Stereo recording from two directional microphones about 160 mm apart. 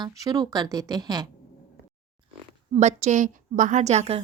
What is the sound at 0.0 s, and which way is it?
Speech, 25° right (ahead or behind).